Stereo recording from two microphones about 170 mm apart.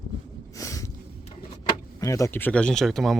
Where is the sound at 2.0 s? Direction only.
20° left (ahead or behind); by 3.2 s centre (ahead or behind).